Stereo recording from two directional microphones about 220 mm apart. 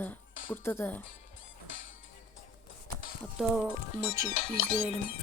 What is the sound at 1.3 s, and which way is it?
Music, 60° left (ahead or behind).